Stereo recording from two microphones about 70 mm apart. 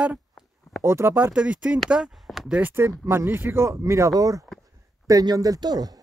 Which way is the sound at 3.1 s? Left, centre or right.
Right.